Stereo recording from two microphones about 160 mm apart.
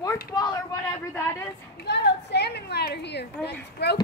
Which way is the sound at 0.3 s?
25° left (ahead or behind).